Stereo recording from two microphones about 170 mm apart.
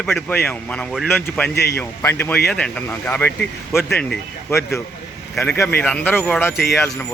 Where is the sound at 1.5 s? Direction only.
75° left (ahead or behind).